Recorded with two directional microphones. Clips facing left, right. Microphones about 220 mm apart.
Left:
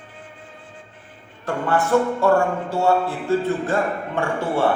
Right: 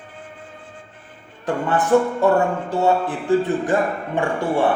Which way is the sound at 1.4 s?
15° right (ahead or behind).